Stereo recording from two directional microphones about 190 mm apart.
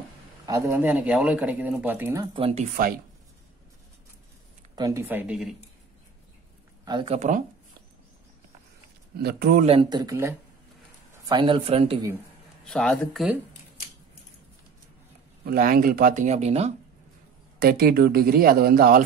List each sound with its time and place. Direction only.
0.5 s speech: 15° right (ahead or behind)
2.3 s speech: 30° right (ahead or behind)
4.7 s speech: 15° right (ahead or behind)
6.8 s speech: 25° right (ahead or behind)
7.2 s speech: 40° right (ahead or behind)
9.2 s speech: 55° right (ahead or behind)
9.7 s speech: 25° right (ahead or behind)
12.6 s speech: 5° left (ahead or behind)
15.4 s speech: 50° right (ahead or behind); by 16.7 s 35° right (ahead or behind)
17.6 s speech: 50° right (ahead or behind)